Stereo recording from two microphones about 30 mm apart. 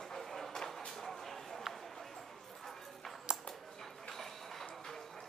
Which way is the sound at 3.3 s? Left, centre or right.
Right.